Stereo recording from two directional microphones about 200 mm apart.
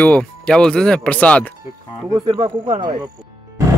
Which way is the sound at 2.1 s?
25° right (ahead or behind).